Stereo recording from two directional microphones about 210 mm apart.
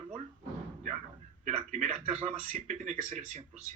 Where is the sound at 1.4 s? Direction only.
30° right (ahead or behind).